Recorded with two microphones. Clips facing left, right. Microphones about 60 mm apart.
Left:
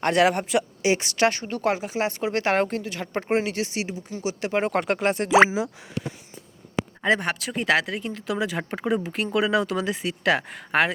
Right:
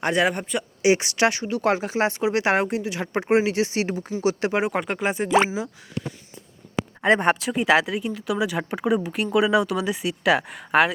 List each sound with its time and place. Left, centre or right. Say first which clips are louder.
0.0 s speech: left 2 dB; centre
0.8 s a woman's voice: right 5 dB; right
1.3 s speech: right 3 dB; left
1.6 s a woman's voice: right 2 dB; right
2.2 s a woman's voice: even; centre
4.5 s speech: left 1 dB; centre
7.0 s speech: right 3 dB; right
7.5 s speech: right 3 dB; centre